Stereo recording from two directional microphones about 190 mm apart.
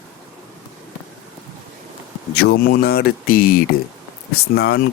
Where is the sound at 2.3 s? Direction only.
60° left (ahead or behind).